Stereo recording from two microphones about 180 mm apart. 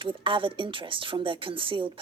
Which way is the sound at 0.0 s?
30° right (ahead or behind).